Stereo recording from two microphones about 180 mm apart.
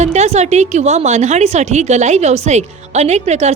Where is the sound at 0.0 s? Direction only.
40° right (ahead or behind).